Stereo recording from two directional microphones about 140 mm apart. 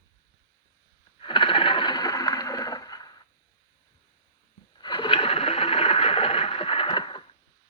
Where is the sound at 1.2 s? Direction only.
35° left (ahead or behind).